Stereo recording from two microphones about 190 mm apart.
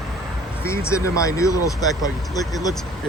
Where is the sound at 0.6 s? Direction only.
15° left (ahead or behind).